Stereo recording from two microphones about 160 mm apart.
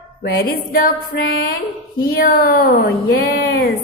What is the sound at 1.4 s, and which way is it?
Speech, 65° left (ahead or behind).